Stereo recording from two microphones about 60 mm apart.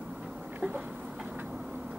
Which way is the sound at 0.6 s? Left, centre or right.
Centre.